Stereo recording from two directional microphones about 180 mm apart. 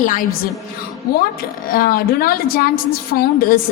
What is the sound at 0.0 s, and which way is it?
A woman's voice, 45° left (ahead or behind).